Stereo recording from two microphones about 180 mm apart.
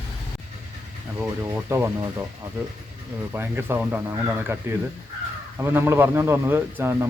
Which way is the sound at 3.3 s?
10° right (ahead or behind).